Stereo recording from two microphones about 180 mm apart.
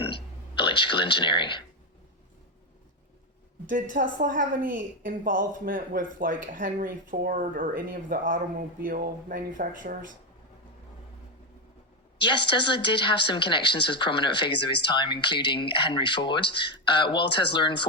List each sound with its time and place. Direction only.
0.0 s a sound: 30° left (ahead or behind)
3.7 s a woman's voice: 45° right (ahead or behind)
12.2 s speech: 25° left (ahead or behind)